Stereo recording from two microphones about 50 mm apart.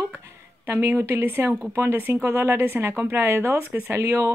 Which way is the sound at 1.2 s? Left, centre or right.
Right.